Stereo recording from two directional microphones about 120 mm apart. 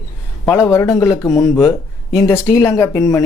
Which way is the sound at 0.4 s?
20° left (ahead or behind).